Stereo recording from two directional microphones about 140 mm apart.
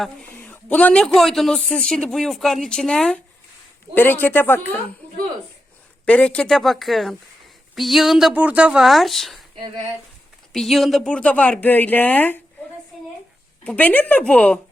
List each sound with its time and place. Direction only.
0.3 s a man's voice: 10° left (ahead or behind)
6.1 s a man's voice: 10° left (ahead or behind)
10.5 s speech: centre (ahead or behind)
13.7 s speech: 10° left (ahead or behind)